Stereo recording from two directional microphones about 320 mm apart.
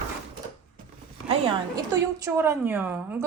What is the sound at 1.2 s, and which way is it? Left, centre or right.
A woman's voice, centre.